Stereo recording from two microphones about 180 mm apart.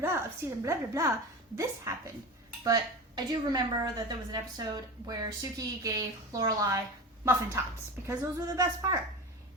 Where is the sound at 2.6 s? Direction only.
20° right (ahead or behind).